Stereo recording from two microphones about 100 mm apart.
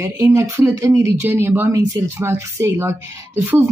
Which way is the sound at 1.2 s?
20° right (ahead or behind).